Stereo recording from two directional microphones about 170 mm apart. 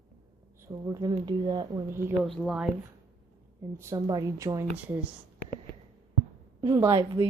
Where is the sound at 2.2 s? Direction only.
Centre (ahead or behind).